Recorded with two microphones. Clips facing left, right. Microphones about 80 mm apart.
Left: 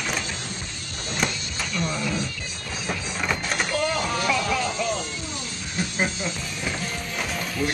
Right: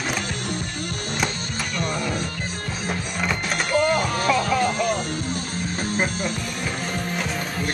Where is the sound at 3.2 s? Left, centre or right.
Centre.